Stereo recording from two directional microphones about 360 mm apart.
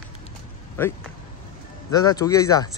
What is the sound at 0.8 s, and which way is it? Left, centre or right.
Speech, centre.